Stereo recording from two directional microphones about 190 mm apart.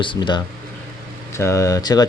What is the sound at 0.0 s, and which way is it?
Speech, 25° left (ahead or behind).